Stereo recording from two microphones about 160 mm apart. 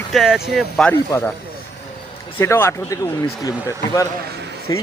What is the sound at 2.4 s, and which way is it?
Speech, 15° left (ahead or behind).